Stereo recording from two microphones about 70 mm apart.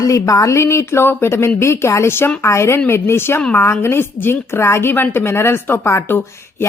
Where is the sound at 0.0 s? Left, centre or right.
Left.